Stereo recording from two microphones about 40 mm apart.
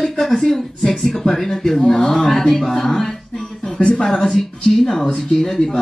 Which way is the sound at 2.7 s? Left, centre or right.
Centre.